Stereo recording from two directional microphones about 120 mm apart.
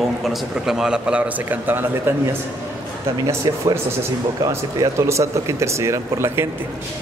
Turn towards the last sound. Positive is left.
turn(degrees=-20)  # may be behind; listen again after turning